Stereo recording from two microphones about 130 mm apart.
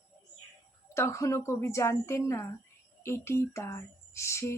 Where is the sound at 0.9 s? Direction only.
20° left (ahead or behind).